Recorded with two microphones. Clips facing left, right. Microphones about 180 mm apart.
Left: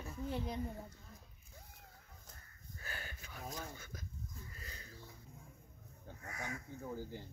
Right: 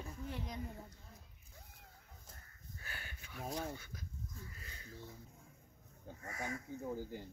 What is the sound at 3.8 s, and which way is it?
Speech, 45° left (ahead or behind).